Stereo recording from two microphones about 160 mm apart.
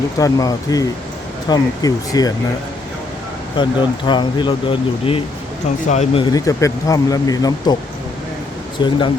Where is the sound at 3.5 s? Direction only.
30° left (ahead or behind).